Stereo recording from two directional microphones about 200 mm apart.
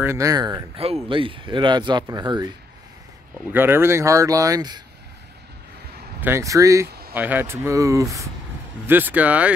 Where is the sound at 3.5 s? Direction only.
10° right (ahead or behind).